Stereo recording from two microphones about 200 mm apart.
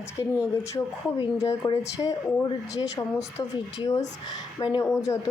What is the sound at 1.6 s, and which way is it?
Speech, 15° left (ahead or behind).